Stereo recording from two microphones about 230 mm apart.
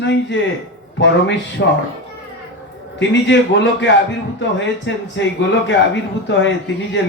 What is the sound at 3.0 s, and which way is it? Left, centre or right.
A man's voice, left.